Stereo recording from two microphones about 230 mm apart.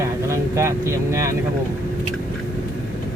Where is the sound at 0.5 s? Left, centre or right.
Centre.